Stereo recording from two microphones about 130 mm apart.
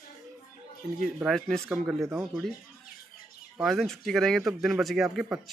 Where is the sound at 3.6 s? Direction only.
Centre (ahead or behind).